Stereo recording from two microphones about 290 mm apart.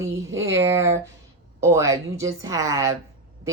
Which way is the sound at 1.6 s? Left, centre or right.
Centre.